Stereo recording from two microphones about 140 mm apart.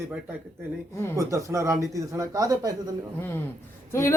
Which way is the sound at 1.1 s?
20° right (ahead or behind).